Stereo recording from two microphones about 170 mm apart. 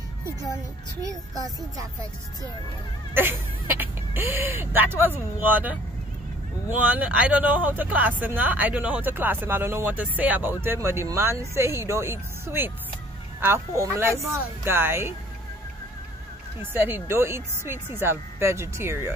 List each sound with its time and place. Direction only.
1.0 s speech: 20° right (ahead or behind)
3.2 s speech: 10° right (ahead or behind)
6.8 s speech: 5° right (ahead or behind)
16.7 s speech: 15° right (ahead or behind)